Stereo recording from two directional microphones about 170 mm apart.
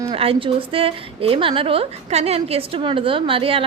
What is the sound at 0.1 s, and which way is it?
A woman's voice, 35° right (ahead or behind).